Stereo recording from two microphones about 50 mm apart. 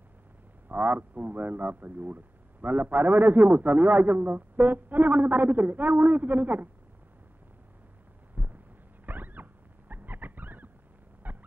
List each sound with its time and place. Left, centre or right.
0.7 s a man's voice: right
8.4 s heart sounds: right
9.0 s rodents: right
11.3 s fowl: right